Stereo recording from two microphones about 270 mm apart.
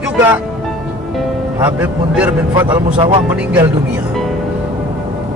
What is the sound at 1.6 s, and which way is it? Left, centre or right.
Speech, centre.